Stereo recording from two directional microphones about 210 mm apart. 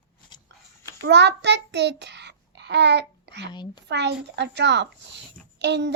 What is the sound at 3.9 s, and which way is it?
A child's voice, 55° right (ahead or behind).